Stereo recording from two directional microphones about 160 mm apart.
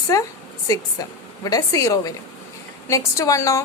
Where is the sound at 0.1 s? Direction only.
20° left (ahead or behind).